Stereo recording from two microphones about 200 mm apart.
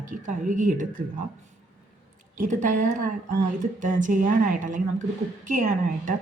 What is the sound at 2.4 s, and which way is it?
Speech, 40° right (ahead or behind).